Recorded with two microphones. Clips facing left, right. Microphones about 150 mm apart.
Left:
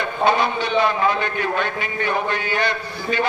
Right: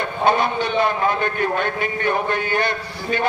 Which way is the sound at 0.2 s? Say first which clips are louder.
Even; 50° right (ahead or behind).